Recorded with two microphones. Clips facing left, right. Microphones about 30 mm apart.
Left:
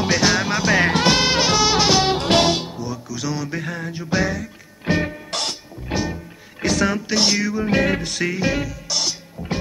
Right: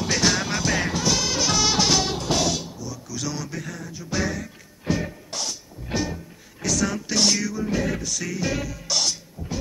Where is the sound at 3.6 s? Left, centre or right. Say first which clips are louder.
Left 7 dB; left.